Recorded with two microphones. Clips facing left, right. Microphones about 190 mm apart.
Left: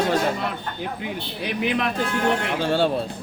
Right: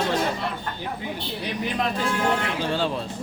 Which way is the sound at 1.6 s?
70° left (ahead or behind).